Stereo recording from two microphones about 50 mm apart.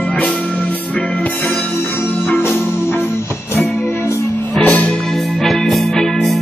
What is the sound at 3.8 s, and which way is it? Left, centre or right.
Music, left.